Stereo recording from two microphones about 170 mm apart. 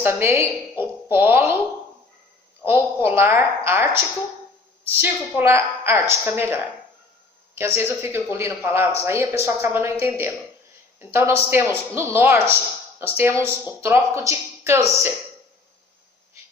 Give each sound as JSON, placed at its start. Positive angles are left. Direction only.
{"t": 0.0, "sound": "a woman's voice", "side_deg": -15}
{"t": 2.6, "sound": "a woman's voice", "side_deg": -15}